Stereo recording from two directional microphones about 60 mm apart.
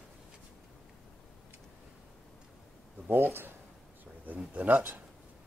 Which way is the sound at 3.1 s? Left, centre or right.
Right.